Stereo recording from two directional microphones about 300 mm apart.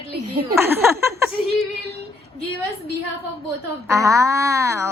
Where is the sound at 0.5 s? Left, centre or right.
Centre.